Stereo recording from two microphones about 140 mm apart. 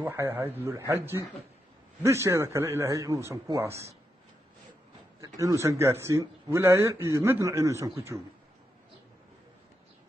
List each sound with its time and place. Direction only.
0.0 s speech: 15° right (ahead or behind)
5.2 s speech: 25° right (ahead or behind)